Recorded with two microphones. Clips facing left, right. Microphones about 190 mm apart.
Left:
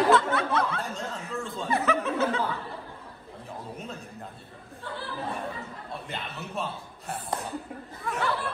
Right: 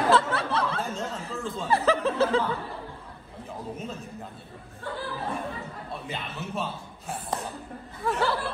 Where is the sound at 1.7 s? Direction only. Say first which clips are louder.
Right 3 dB; 35° right (ahead or behind).